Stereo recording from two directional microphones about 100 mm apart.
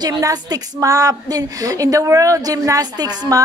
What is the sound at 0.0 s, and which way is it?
A woman's voice, 40° right (ahead or behind).